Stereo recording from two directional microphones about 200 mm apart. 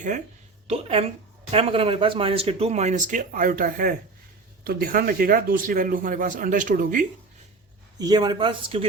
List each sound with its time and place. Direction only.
0.7 s speech: 30° right (ahead or behind)
7.9 s speech: 20° right (ahead or behind)